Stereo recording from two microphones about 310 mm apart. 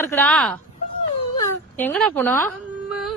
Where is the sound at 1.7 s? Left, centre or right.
Centre.